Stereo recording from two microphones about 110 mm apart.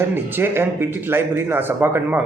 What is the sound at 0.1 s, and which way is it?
Speech, 20° right (ahead or behind).